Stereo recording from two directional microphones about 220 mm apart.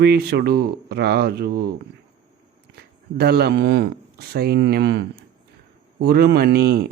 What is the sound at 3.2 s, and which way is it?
Speech, 45° right (ahead or behind).